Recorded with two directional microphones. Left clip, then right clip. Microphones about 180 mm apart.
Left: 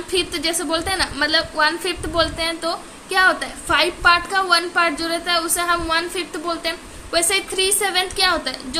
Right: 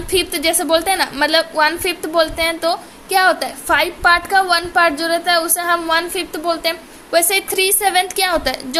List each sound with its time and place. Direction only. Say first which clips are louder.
0.1 s a woman's voice: right 4 dB; 35° right (ahead or behind)